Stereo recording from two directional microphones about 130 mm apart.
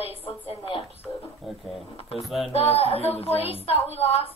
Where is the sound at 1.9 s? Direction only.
45° left (ahead or behind).